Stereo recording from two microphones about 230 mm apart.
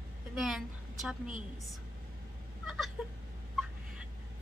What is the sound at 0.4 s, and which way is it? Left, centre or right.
Speech, centre.